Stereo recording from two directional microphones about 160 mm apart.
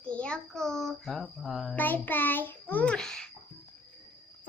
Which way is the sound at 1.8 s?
10° left (ahead or behind).